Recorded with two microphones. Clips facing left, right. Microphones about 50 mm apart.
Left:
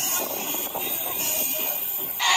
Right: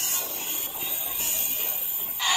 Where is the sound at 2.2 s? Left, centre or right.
Left.